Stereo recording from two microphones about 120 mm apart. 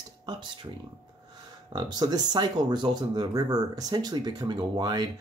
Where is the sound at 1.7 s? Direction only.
35° right (ahead or behind).